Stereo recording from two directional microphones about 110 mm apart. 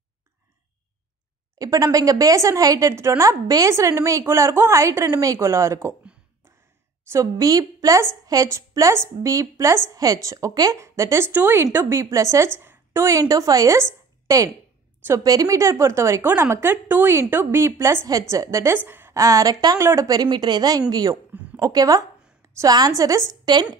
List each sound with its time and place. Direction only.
1.6 s a woman's voice: 30° right (ahead or behind)
7.1 s a woman's voice: 30° right (ahead or behind)
12.5 s a sound: 25° right (ahead or behind)
13.3 s a woman's voice: 35° right (ahead or behind)